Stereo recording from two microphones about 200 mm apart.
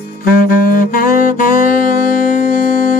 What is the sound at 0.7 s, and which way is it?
Saxophone, 45° left (ahead or behind).